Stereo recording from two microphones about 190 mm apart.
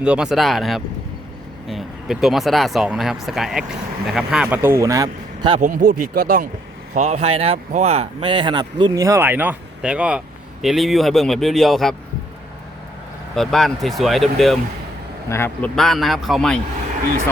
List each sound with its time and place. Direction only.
0.0 s speech: 5° right (ahead or behind); by 5.5 s 20° right (ahead or behind)
5.5 s speech: 45° right (ahead or behind); by 11.9 s centre (ahead or behind)
13.3 s speech: centre (ahead or behind)
15.3 s speech: 10° left (ahead or behind)